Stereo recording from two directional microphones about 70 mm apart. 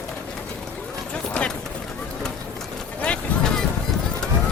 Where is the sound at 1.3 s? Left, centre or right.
Centre.